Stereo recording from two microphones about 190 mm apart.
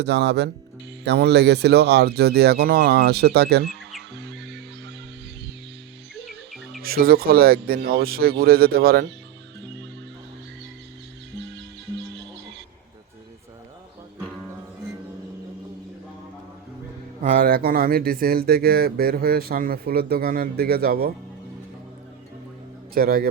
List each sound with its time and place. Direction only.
0.0 s speech: 65° right (ahead or behind)
4.1 s music: 65° right (ahead or behind)
6.8 s speech: 50° right (ahead or behind)
17.2 s speech: 50° right (ahead or behind)
23.0 s speech: 55° right (ahead or behind)